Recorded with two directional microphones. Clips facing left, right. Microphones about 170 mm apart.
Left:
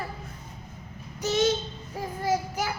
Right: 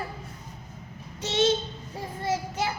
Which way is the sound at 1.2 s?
25° right (ahead or behind).